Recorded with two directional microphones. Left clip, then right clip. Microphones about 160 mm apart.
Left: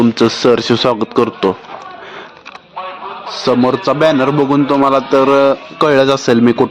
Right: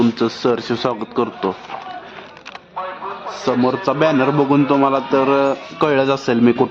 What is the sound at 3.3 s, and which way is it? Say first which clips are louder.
A man's voice: left 5 dB; 30° left (ahead or behind).